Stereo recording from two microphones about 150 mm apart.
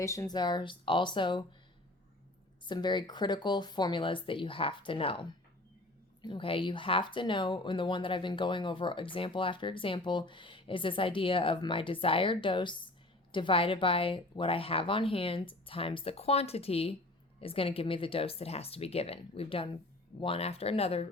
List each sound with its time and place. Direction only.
0.0 s speech: 20° left (ahead or behind)
2.6 s speech: 30° left (ahead or behind)
6.2 s speech: 35° left (ahead or behind)